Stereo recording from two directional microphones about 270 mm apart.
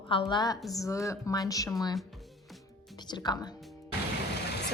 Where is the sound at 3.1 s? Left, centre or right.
Centre.